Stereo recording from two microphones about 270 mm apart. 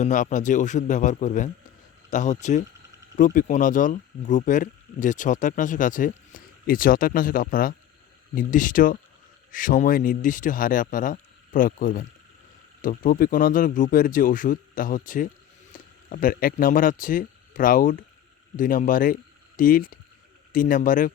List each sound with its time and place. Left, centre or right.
0.0 s speech: left